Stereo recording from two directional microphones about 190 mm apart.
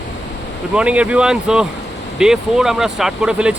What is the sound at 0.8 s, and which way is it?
Speech, 5° right (ahead or behind).